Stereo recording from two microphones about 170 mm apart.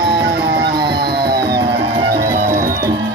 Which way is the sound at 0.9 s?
80° right.